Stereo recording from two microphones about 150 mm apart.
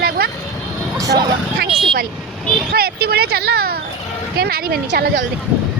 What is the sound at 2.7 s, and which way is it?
Speech, 90° right.